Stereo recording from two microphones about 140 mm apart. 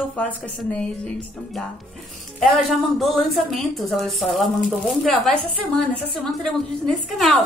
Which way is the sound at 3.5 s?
Centre (ahead or behind).